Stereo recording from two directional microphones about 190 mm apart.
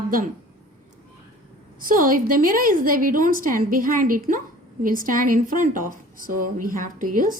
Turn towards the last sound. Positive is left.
turn(degrees=-45)  # may be behind; listen again after turning